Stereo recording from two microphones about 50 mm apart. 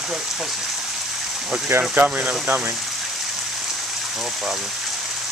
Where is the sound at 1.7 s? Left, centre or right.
Right.